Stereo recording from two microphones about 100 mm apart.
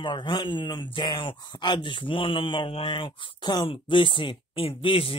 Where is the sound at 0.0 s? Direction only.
50° left (ahead or behind).